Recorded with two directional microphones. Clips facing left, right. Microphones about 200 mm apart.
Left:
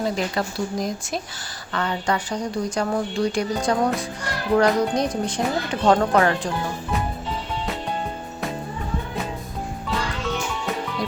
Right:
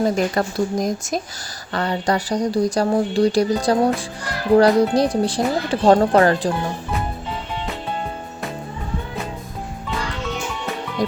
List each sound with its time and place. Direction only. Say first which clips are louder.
0.0 s speech: right 5 dB; 45° right (ahead or behind)
1.7 s speech: right 3 dB; 35° right (ahead or behind)